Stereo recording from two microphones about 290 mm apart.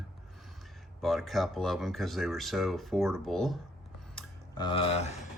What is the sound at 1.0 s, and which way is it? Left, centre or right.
Speech, centre.